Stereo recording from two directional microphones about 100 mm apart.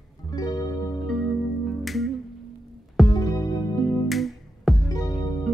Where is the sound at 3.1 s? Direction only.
40° left (ahead or behind).